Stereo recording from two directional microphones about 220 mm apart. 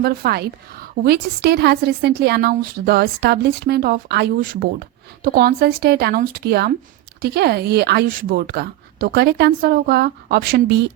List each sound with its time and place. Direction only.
0.0 s a woman's voice: 45° right (ahead or behind)